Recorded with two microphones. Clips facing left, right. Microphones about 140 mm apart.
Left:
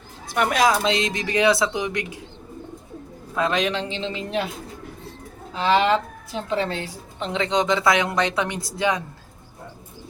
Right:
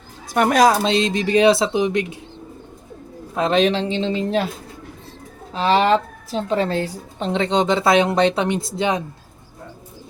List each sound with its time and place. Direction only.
0.3 s a woman's voice: 45° right (ahead or behind); by 2.0 s 25° right (ahead or behind)
3.3 s a woman's voice: 25° right (ahead or behind)
5.5 s a woman's voice: 30° right (ahead or behind)